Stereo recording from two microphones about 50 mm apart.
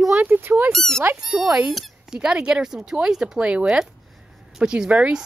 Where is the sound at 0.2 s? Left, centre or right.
Right.